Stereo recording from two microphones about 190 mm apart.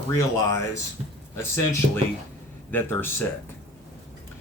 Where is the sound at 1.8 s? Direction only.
45° right (ahead or behind).